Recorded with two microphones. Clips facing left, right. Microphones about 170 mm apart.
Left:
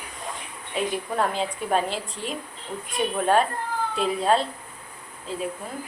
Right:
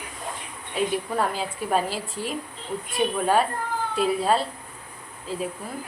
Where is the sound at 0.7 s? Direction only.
5° right (ahead or behind).